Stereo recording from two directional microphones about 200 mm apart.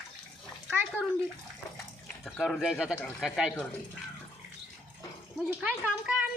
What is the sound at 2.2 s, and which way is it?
Speech, centre (ahead or behind).